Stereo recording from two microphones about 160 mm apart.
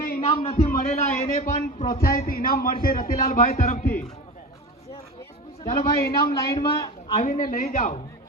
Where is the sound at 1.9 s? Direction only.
65° left (ahead or behind).